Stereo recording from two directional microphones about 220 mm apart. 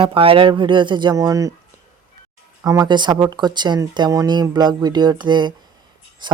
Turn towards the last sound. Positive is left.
turn(degrees=-20)  # may be behind; listen again after turning